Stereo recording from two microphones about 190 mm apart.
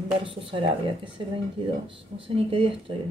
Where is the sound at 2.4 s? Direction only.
30° right (ahead or behind).